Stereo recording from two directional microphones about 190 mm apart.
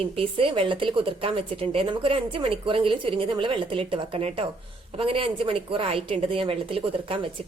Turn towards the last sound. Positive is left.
turn(degrees=-30)  # may be behind; listen again after turning